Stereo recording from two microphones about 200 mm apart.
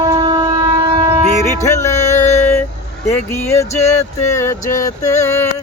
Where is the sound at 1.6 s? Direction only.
15° left (ahead or behind).